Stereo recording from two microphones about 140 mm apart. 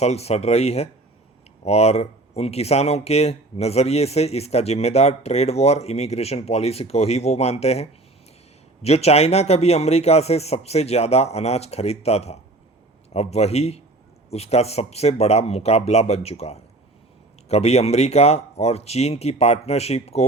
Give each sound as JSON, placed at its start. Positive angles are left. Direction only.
{"t": 0.0, "sound": "speech", "side_deg": 50}